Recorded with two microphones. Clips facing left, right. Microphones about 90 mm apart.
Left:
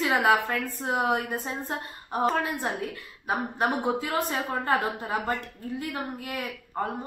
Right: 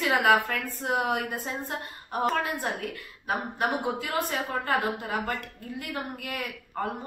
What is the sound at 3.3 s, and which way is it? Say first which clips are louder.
A woman's voice: left 1 dB; 30° left (ahead or behind).